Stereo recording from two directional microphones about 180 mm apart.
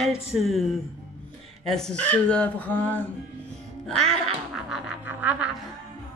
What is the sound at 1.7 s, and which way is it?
Speech, 5° left (ahead or behind).